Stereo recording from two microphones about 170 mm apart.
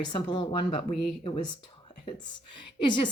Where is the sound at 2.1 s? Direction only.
25° left (ahead or behind).